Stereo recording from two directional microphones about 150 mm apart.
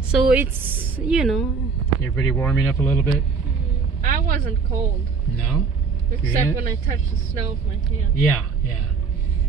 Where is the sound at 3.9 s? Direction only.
75° right (ahead or behind).